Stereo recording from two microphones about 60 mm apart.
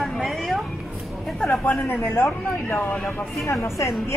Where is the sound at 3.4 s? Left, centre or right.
Left.